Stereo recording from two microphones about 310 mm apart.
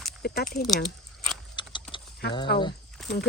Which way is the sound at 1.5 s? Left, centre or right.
Centre.